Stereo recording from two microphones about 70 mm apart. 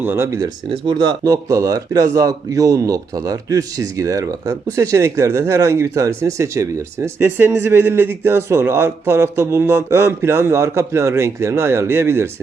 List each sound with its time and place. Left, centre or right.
0.0 s speech: right
0.9 s speech: right